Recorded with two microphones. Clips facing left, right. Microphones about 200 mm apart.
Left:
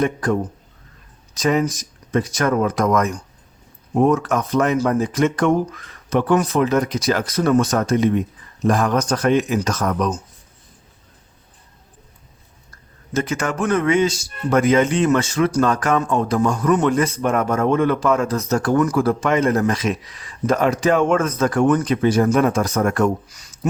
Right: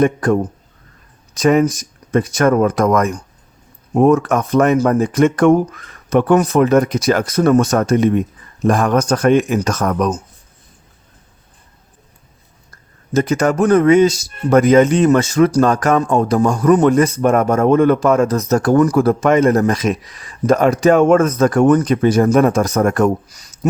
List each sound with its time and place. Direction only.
0.0 s speech: 50° right (ahead or behind)
13.1 s speech: 40° right (ahead or behind)